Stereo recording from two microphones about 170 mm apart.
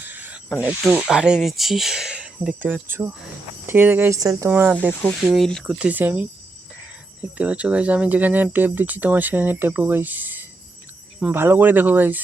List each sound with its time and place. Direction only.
0.0 s snake: 10° right (ahead or behind)
0.6 s speech: 10° right (ahead or behind)
4.5 s speech: 10° right (ahead or behind)